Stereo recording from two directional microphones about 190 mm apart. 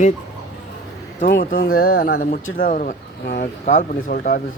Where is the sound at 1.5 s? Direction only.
50° left (ahead or behind).